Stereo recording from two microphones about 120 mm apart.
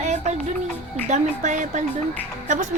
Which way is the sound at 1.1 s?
90° right.